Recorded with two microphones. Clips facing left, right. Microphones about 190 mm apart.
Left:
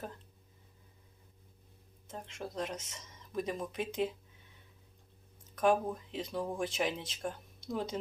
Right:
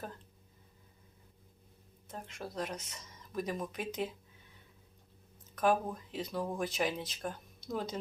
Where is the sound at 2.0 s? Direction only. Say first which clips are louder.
Left 1 dB; 25° left (ahead or behind).